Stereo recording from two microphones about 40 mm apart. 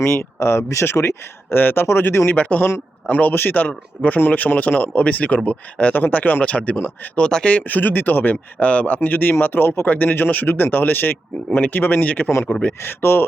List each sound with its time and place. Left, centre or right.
0.1 s speech: left
2.3 s speech: left
5.0 s speech: left
6.7 s speech: left
7.2 s speech: centre
7.4 s speech: left
8.5 s speech: left
9.0 s speech: left
9.8 s speech: left
12.8 s speech: left